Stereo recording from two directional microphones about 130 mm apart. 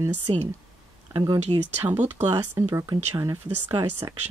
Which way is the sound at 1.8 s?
15° right (ahead or behind).